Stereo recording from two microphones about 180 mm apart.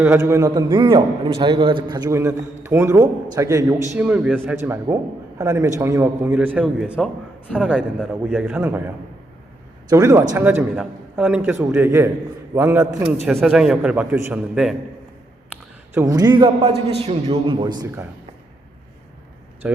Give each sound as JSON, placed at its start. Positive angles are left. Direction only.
{"t": 0.0, "sound": "a man's voice", "side_deg": -15}
{"t": 3.9, "sound": "a man's voice", "side_deg": -5}
{"t": 9.9, "sound": "a man's voice", "side_deg": -20}
{"t": 13.2, "sound": "a man's voice", "side_deg": 0}
{"t": 16.0, "sound": "a man's voice", "side_deg": -20}
{"t": 19.6, "sound": "a man's voice", "side_deg": -5}